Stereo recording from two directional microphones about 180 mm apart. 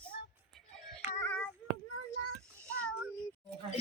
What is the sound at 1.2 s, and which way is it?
Child singing, 10° left (ahead or behind).